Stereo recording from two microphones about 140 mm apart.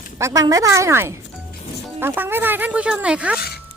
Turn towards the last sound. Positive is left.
turn(degrees=-10)  # may be behind; listen again after turning